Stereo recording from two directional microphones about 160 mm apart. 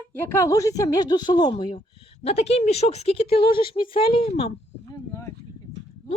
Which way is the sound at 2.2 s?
40° left (ahead or behind).